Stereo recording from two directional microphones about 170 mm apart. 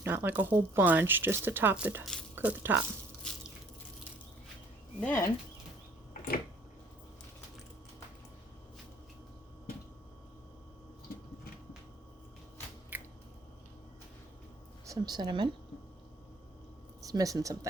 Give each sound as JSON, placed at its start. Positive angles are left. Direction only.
{"t": 0.0, "sound": "speech", "side_deg": -10}
{"t": 3.3, "sound": "biting", "side_deg": 5}
{"t": 4.9, "sound": "speech", "side_deg": 10}
{"t": 12.9, "sound": "a sound", "side_deg": -10}
{"t": 14.8, "sound": "a woman's voice", "side_deg": -25}
{"t": 17.0, "sound": "speech", "side_deg": -20}